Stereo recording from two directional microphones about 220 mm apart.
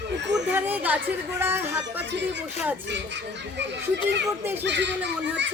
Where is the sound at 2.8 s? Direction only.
50° right (ahead or behind).